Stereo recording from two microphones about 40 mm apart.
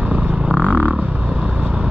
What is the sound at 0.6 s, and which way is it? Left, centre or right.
Vehicle, left.